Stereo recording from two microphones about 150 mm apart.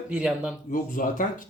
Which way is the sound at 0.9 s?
65° left (ahead or behind).